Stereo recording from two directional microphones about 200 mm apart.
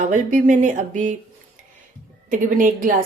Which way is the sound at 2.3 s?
40° right (ahead or behind).